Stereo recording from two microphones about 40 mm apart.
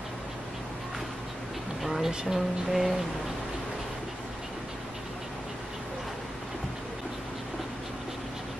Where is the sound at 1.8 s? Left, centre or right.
Centre.